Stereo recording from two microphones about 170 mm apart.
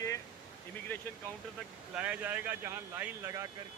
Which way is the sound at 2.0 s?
10° right (ahead or behind).